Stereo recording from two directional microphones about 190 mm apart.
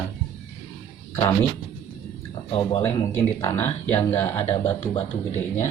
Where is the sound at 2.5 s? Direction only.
30° left (ahead or behind).